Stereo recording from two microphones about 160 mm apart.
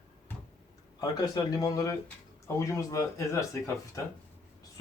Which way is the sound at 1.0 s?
25° left (ahead or behind).